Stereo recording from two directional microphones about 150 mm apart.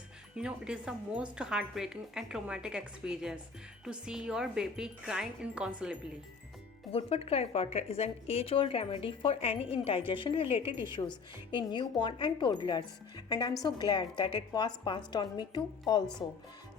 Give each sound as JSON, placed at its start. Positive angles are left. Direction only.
{"t": 0.3, "sound": "a woman's voice", "side_deg": -5}
{"t": 6.9, "sound": "a woman's voice", "side_deg": 45}